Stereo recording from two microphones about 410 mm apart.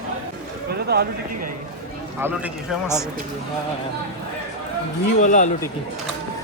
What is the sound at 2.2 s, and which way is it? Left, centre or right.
Speech, centre.